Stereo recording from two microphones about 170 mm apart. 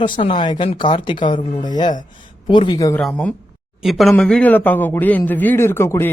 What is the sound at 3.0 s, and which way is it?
A man's voice, 5° left (ahead or behind).